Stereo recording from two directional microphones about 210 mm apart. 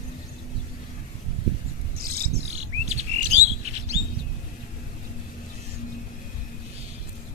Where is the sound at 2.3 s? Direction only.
30° right (ahead or behind).